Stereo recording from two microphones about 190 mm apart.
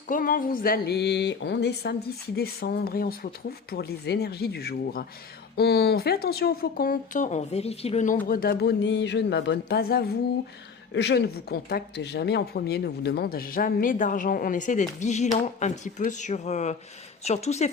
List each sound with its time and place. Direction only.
0.1 s speech: 50° left (ahead or behind)
8.3 s a woman's voice: 50° left (ahead or behind); by 17.7 s 35° left (ahead or behind)